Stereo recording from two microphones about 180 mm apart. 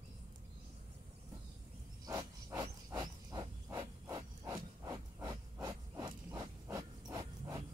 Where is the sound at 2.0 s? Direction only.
20° right (ahead or behind).